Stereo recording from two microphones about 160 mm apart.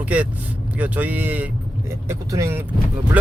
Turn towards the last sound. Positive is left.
turn(degrees=-10)  # may be behind; listen again after turning